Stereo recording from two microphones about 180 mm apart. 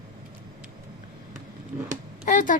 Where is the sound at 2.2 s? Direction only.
50° left (ahead or behind).